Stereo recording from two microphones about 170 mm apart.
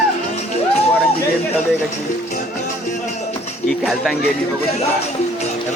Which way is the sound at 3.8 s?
Centre (ahead or behind).